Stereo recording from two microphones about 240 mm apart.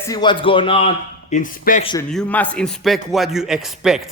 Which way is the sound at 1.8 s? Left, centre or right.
Centre.